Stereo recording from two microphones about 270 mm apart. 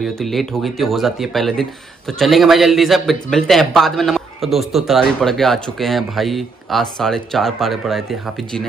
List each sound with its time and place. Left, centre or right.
0.0 s speech: centre